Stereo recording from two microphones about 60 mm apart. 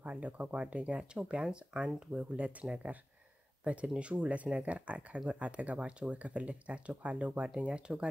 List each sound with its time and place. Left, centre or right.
0.0 s speech: right